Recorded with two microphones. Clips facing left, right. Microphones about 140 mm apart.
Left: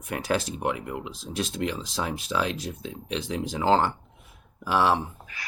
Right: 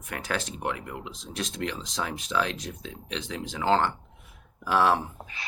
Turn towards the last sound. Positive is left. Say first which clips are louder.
# right 2 dB
turn(degrees=-25)  # may be behind; listen again after turning